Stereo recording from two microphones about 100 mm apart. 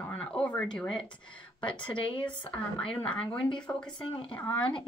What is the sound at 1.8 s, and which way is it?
Speech, 60° left (ahead or behind).